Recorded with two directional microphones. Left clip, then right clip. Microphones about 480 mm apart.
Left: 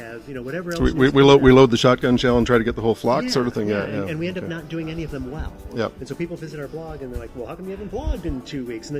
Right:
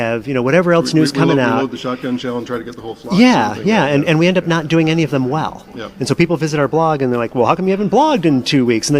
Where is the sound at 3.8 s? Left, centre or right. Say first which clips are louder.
Right 13 dB; right.